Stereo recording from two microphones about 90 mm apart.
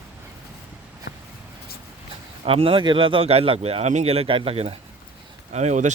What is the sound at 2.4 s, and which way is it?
Speech, 90° right.